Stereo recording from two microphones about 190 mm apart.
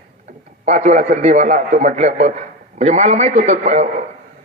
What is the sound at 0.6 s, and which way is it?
A man's voice, 35° right (ahead or behind).